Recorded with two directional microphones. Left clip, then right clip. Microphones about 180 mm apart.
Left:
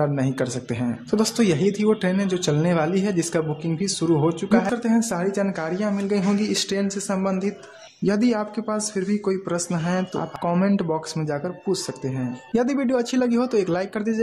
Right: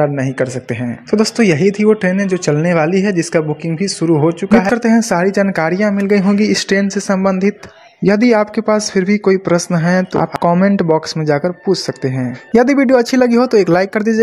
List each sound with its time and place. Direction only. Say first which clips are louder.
0.0 s speech: right 8 dB; 20° right (ahead or behind); by 14.2 s 35° right (ahead or behind)